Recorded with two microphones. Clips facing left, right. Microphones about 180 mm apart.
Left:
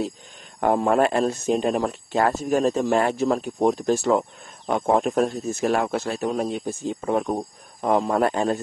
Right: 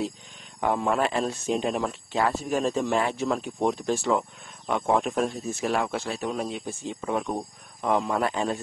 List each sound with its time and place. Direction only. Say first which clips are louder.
0.6 s speech: left 5 dB; 45° left (ahead or behind)